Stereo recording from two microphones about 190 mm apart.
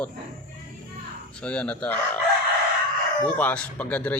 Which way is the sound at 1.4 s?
5° left (ahead or behind).